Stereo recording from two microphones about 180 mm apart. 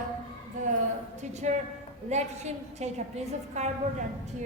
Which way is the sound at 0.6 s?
45° right (ahead or behind).